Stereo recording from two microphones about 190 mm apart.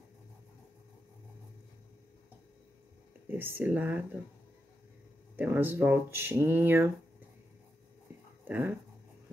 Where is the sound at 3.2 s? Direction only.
10° right (ahead or behind).